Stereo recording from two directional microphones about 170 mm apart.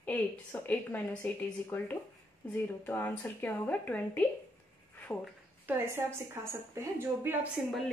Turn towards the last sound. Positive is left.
turn(degrees=0)  # may be behind; listen again after turning